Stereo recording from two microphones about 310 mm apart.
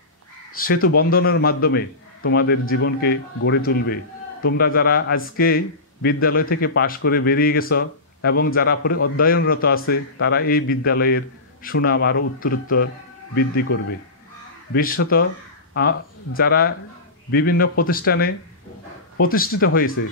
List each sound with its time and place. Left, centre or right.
0.8 s a man's voice: left
14.7 s a man's voice: left